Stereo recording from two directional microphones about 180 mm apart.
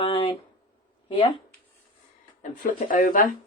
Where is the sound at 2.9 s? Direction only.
50° left (ahead or behind).